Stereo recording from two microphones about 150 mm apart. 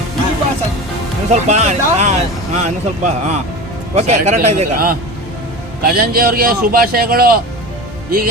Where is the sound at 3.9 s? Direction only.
50° right (ahead or behind).